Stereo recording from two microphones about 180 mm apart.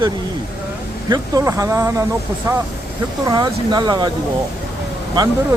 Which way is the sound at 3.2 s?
20° right (ahead or behind).